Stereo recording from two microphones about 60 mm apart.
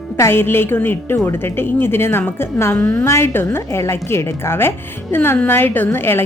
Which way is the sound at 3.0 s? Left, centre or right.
Left.